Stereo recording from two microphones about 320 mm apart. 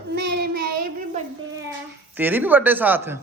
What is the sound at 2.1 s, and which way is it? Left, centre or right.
Speech, centre.